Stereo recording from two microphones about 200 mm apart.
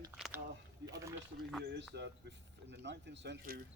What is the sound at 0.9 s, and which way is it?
Speech, 15° right (ahead or behind).